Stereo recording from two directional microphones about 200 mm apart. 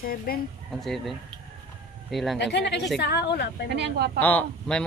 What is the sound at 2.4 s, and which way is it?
A woman's voice, 60° left (ahead or behind).